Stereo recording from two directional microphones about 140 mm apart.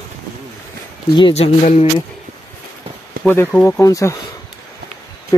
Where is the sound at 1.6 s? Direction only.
55° left (ahead or behind).